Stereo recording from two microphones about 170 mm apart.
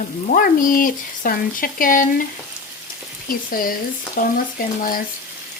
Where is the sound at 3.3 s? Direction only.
55° left (ahead or behind).